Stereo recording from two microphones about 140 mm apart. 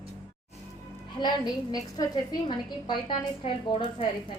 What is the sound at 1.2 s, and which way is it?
A woman's voice, 25° left (ahead or behind).